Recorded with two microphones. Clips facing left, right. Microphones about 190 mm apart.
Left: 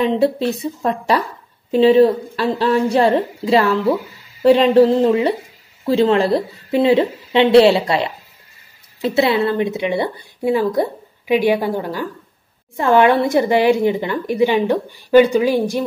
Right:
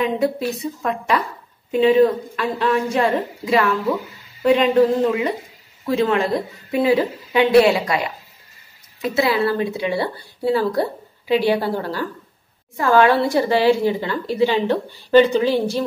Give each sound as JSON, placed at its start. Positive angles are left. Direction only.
{"t": 0.0, "sound": "a woman's voice", "side_deg": 30}